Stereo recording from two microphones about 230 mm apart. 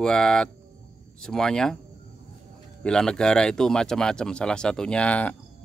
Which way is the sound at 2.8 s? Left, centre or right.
Centre.